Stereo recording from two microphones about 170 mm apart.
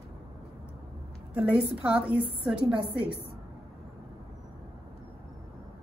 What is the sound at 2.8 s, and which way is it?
Speech, 30° right (ahead or behind).